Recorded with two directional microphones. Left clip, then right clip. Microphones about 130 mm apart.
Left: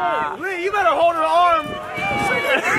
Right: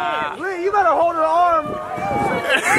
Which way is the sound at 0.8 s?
35° left (ahead or behind).